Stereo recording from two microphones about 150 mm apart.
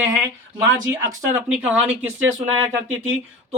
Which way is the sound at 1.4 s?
10° right (ahead or behind).